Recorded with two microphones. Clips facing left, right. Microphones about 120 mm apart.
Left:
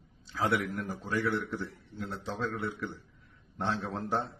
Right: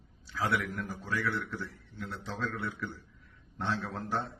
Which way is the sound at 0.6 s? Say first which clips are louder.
Left 2 dB; 45° left (ahead or behind).